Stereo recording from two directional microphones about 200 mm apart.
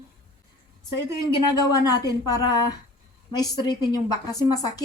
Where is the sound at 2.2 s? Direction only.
15° left (ahead or behind).